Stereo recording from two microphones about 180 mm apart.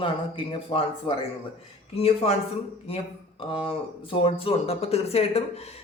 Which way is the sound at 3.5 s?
30° left (ahead or behind).